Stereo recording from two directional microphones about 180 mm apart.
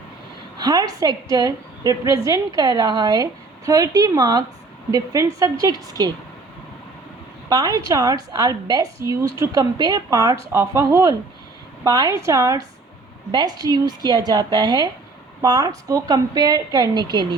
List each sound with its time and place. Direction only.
0.6 s a woman's voice: 20° right (ahead or behind)
7.5 s a woman's voice: 20° right (ahead or behind)